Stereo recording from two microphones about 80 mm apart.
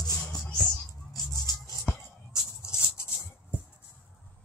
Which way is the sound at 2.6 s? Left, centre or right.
Left.